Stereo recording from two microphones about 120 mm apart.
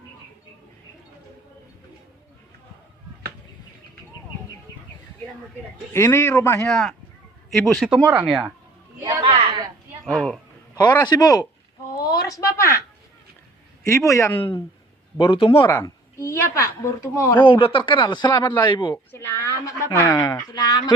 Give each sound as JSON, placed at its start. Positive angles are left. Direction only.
{"t": 5.9, "sound": "speech", "side_deg": 25}
{"t": 6.7, "sound": "speech", "side_deg": 5}
{"t": 9.0, "sound": "a sound", "side_deg": -25}
{"t": 9.2, "sound": "a sound", "side_deg": -45}
{"t": 10.0, "sound": "speech", "side_deg": 5}
{"t": 10.8, "sound": "a man's voice", "side_deg": 35}
{"t": 11.9, "sound": "a sound", "side_deg": 30}
{"t": 13.8, "sound": "speech", "side_deg": 25}
{"t": 14.3, "sound": "speech", "side_deg": 45}
{"t": 16.2, "sound": "speech", "side_deg": 20}
{"t": 17.4, "sound": "a man's voice", "side_deg": 45}
{"t": 19.1, "sound": "speech", "side_deg": 20}